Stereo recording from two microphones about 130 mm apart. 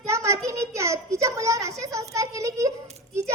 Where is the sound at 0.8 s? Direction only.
20° right (ahead or behind).